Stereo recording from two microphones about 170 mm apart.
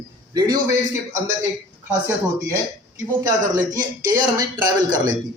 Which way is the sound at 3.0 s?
15° right (ahead or behind).